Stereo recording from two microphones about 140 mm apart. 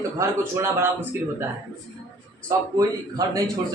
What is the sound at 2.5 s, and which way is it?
Speech, 25° right (ahead or behind).